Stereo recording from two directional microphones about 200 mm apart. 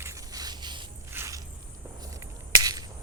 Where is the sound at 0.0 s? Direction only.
20° right (ahead or behind).